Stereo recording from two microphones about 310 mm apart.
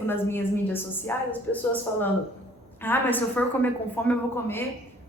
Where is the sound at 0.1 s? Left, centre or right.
Centre.